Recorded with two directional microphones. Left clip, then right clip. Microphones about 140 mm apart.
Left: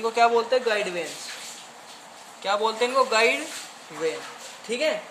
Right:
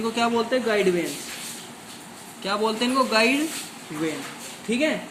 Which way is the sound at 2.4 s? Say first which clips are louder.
Left 1 dB; 80° left.